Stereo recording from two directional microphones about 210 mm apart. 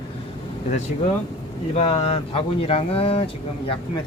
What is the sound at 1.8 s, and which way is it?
Speech, 30° left (ahead or behind).